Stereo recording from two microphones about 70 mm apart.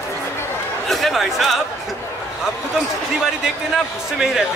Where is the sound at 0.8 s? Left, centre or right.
Centre.